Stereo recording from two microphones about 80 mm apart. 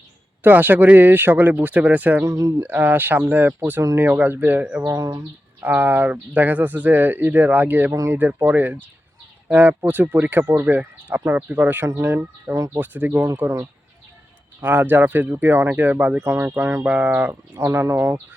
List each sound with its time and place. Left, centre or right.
0.4 s speech: right
2.2 s speech: right
2.6 s speech: right
4.9 s speech: right
5.5 s speech: right
12.5 s speech: right
12.8 s speech: right
14.6 s speech: right
16.8 s speech: right